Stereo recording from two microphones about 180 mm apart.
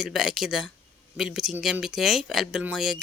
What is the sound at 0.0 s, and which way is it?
Speech, centre (ahead or behind).